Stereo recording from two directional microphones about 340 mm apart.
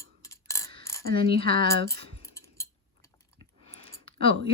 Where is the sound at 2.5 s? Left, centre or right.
Centre.